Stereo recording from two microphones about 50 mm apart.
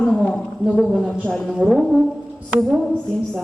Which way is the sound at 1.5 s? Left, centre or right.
Centre.